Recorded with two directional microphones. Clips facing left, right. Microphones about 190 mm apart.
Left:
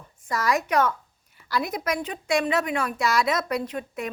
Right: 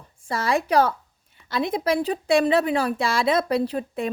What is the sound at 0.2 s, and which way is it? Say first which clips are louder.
A woman's voice: right 1 dB; 30° right (ahead or behind).